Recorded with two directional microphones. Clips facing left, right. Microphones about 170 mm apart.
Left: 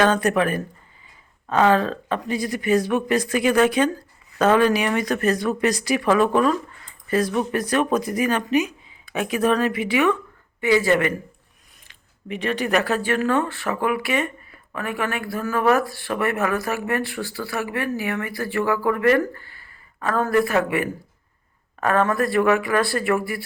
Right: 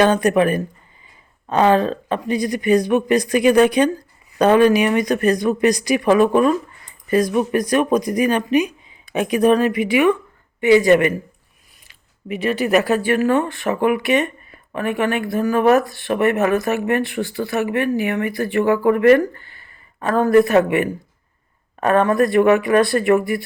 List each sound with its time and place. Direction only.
0.0 s speech: 15° right (ahead or behind)